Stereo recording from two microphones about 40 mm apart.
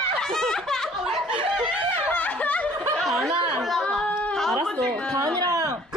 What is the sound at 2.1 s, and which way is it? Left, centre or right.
Snicker, left.